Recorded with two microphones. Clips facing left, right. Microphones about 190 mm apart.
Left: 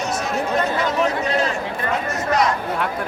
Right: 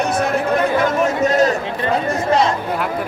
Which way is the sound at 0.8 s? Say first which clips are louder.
Right 4 dB; 45° right (ahead or behind).